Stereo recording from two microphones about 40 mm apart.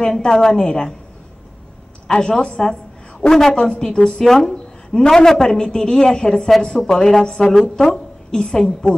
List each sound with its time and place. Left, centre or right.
0.2 s speech: centre
2.0 s a woman's voice: centre
4.1 s a woman's voice: centre